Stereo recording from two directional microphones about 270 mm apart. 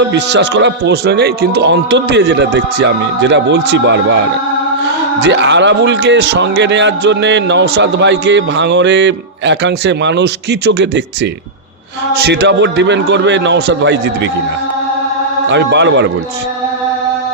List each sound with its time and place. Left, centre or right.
0.0 s a man's voice: right
5.2 s a man's voice: right
15.4 s a man's voice: right